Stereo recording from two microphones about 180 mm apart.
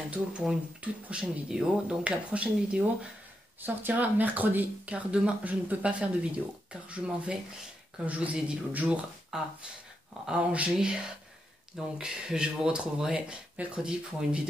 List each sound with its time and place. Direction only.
0.1 s speech: 5° right (ahead or behind)